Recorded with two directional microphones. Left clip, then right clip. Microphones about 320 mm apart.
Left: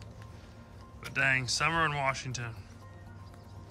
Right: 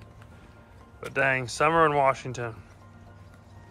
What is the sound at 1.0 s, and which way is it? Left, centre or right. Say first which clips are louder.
Speech: right 3 dB; centre.